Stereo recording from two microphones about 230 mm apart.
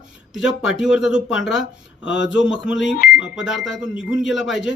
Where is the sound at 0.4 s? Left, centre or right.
Left.